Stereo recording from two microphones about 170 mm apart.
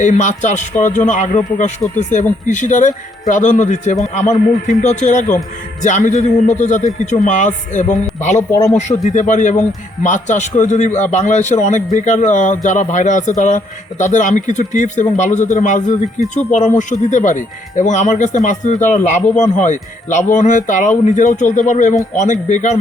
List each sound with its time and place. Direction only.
0.0 s speech: 45° left (ahead or behind)
8.4 s speech: 20° left (ahead or behind)
8.7 s speech: 45° left (ahead or behind)